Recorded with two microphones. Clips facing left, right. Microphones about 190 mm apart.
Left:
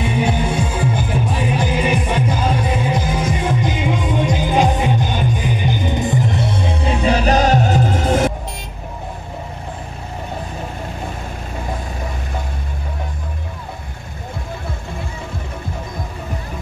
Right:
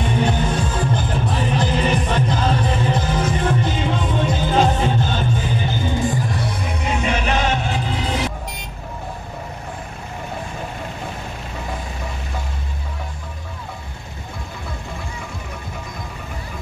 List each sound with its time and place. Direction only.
0.0 s music: 10° left (ahead or behind); by 8.3 s 50° left (ahead or behind)